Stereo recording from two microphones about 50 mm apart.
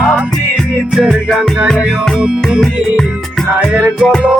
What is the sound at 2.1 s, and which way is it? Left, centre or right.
Music, centre.